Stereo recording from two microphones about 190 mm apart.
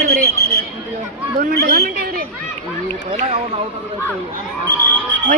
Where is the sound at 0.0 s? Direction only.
55° right (ahead or behind).